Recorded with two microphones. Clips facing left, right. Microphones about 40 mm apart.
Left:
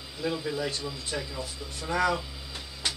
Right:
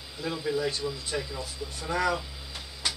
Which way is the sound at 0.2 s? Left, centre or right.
Centre.